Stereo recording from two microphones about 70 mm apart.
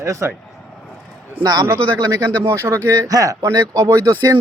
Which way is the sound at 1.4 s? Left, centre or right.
Right.